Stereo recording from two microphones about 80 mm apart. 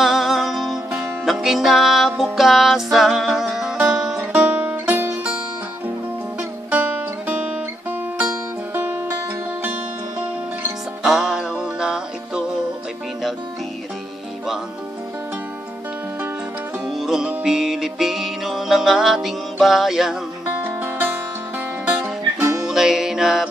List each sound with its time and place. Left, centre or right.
0.0 s music: centre
4.2 s music: right
6.7 s music: centre
11.0 s music: centre
16.9 s music: centre
20.4 s music: right
22.7 s music: centre